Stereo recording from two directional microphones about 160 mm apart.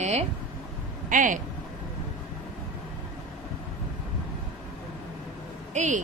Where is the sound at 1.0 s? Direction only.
55° right (ahead or behind).